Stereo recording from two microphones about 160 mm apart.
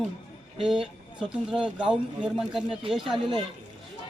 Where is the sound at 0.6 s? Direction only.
5° right (ahead or behind).